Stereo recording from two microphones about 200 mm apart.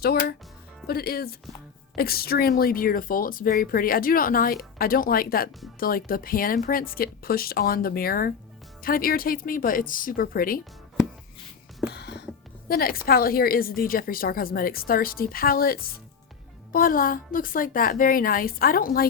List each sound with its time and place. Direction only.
0.0 s speech: 50° left (ahead or behind)
11.9 s music: 55° left (ahead or behind)
12.6 s speech: 50° left (ahead or behind)